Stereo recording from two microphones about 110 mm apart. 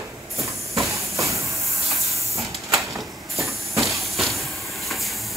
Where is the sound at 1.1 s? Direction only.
30° right (ahead or behind).